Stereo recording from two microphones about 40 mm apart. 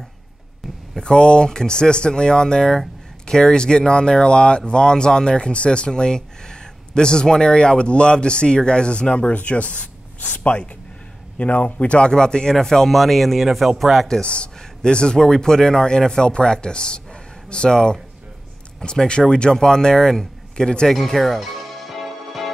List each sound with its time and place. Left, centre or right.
0.9 s speech: centre
12.1 s a man's voice: centre
14.2 s a man's voice: left
20.9 s music: centre